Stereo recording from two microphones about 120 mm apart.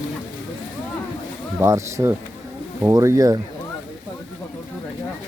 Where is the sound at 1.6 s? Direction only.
25° right (ahead or behind).